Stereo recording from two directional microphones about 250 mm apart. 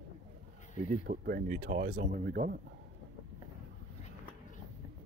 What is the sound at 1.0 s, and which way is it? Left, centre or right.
Speech, right.